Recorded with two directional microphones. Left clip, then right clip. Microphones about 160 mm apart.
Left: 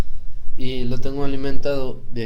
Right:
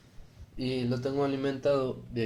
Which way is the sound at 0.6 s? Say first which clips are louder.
Left 3 dB; 5° left (ahead or behind).